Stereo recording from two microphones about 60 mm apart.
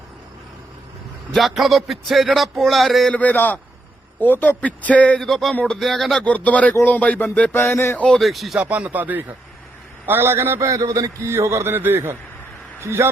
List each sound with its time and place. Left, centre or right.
1.4 s music: centre
3.1 s a man's voice: left
5.2 s music: centre
6.2 s a man's voice: left
7.5 s a sound: left
7.9 s speech: centre
8.2 s music: centre
8.5 s speech: right
10.1 s a man's voice: right
10.6 s a man's voice: right